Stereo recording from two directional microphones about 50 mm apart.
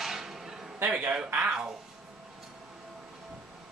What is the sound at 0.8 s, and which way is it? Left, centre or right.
Speech, right.